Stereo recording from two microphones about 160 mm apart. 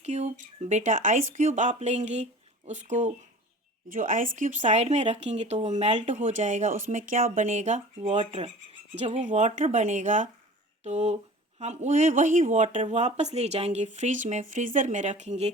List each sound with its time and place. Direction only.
0.0 s speech: 45° right (ahead or behind)